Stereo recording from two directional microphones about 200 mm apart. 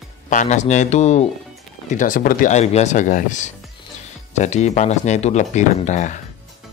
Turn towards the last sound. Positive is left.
turn(degrees=35)  # may be behind; listen again after turning